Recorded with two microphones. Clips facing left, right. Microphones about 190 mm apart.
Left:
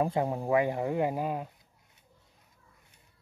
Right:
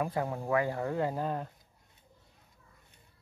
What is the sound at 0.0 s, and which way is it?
Speech, 20° left (ahead or behind).